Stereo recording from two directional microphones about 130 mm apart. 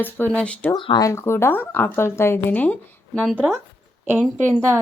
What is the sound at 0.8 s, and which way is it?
Speech, 40° left (ahead or behind).